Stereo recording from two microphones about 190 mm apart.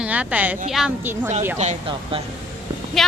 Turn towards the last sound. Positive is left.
turn(degrees=0)  # may be behind; listen again after turning